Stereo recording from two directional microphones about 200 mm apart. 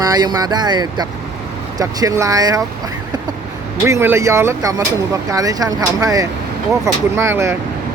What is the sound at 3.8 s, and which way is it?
Speech, 15° right (ahead or behind).